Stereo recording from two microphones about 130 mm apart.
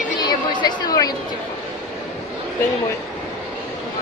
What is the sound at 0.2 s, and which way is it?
Chatter, 35° left (ahead or behind).